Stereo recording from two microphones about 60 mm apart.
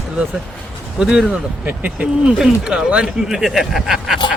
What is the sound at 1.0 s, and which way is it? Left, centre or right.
Speech, centre.